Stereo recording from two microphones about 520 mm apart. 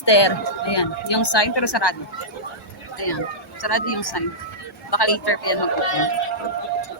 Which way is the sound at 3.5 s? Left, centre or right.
Left.